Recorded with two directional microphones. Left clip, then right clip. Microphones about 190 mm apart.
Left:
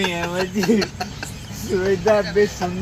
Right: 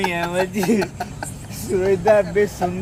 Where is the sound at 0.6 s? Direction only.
65° right (ahead or behind).